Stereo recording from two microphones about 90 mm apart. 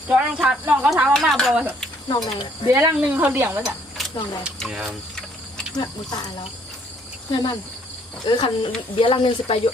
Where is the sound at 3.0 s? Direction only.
15° right (ahead or behind).